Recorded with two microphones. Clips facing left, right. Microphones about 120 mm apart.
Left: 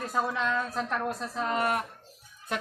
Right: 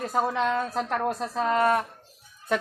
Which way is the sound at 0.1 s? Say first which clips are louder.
Right 4 dB; 35° right (ahead or behind).